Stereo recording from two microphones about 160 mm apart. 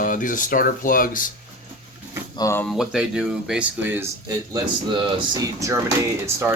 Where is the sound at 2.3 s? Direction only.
20° left (ahead or behind).